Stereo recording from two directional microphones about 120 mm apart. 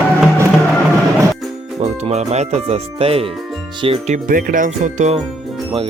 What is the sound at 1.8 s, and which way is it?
Speech, 65° right (ahead or behind).